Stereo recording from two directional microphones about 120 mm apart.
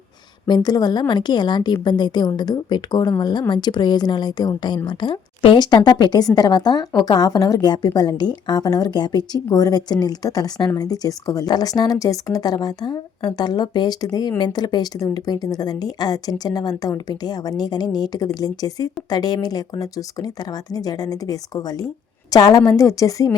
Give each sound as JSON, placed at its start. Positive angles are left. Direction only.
{"t": 0.4, "sound": "a woman's voice", "side_deg": 35}